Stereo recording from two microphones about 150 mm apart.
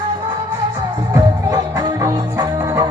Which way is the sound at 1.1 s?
25° right (ahead or behind).